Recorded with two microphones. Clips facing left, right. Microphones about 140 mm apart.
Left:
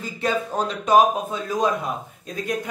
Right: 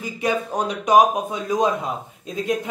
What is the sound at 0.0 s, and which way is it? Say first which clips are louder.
Speech: right 1 dB; 15° right (ahead or behind).